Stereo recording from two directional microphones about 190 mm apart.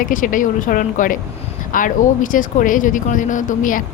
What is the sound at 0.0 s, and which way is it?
Speech, 45° left (ahead or behind).